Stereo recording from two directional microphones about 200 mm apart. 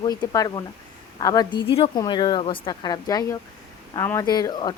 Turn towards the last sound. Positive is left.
turn(degrees=20)  # may be behind; listen again after turning